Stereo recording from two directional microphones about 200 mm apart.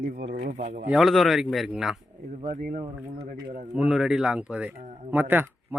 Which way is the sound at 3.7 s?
5° right (ahead or behind).